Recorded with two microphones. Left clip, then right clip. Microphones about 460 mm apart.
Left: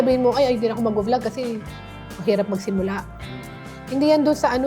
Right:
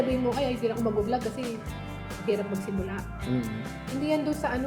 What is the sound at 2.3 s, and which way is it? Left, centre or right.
Speech, left.